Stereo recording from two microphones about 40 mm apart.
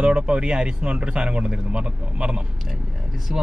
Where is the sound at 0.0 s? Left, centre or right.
Right.